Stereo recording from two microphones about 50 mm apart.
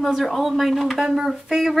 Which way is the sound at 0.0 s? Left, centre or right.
Centre.